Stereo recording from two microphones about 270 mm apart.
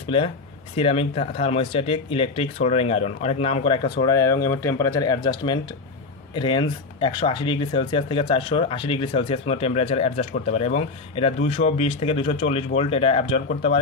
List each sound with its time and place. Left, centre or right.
0.7 s speech: left